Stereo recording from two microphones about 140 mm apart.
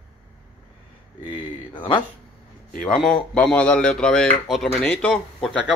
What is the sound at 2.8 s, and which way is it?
Speech, 5° left (ahead or behind).